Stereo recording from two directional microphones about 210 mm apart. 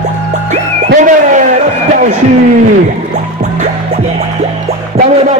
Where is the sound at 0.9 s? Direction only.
35° right (ahead or behind).